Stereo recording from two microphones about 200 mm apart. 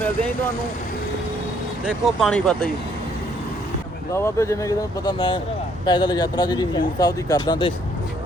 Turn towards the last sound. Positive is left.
turn(degrees=20)  # may be behind; listen again after turning